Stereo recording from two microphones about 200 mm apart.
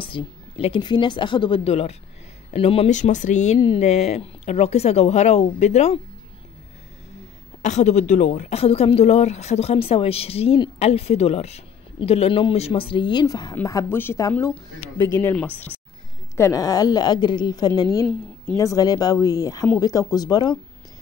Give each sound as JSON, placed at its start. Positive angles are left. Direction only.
{"t": 0.0, "sound": "a woman's voice", "side_deg": 25}
{"t": 3.5, "sound": "a woman's voice", "side_deg": 25}
{"t": 7.6, "sound": "speech", "side_deg": 35}